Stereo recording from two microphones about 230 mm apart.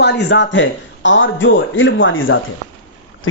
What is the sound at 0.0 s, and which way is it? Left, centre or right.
A man's voice, left.